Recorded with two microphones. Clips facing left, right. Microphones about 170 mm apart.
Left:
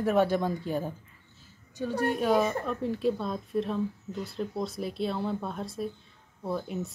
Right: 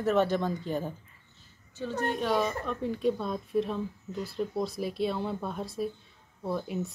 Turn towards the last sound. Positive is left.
turn(degrees=0)  # may be behind; listen again after turning